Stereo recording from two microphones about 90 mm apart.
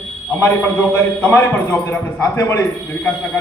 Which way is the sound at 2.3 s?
35° left (ahead or behind).